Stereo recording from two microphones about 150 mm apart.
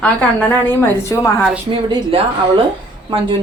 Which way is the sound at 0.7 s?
15° left (ahead or behind).